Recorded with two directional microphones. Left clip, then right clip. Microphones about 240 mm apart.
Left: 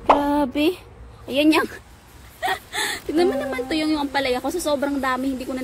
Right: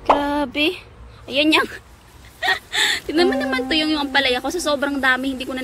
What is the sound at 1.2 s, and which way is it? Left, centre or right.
A woman's voice, centre.